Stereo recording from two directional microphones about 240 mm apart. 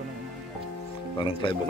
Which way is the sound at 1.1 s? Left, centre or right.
Left.